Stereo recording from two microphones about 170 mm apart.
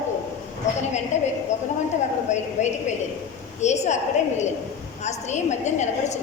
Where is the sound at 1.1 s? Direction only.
45° left (ahead or behind).